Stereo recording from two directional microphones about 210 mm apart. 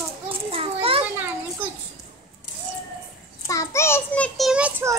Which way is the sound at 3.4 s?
15° left (ahead or behind).